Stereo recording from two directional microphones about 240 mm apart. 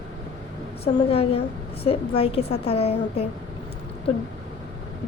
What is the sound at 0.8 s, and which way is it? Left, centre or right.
A woman's voice, left.